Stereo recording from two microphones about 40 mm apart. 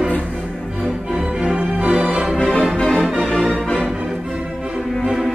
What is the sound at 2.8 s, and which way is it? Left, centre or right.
Music, centre.